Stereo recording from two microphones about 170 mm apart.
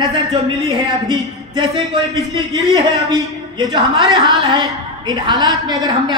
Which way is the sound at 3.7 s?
25° right (ahead or behind).